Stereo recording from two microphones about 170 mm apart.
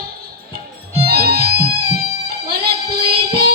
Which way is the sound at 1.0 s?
65° right (ahead or behind).